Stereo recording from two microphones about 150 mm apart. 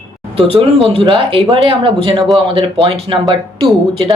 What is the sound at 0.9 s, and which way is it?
Speech, 35° right (ahead or behind).